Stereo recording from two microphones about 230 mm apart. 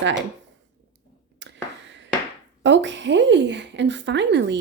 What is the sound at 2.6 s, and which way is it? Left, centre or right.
Speech, right.